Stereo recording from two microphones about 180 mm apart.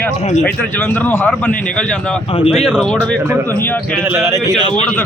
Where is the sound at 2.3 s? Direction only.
30° left (ahead or behind).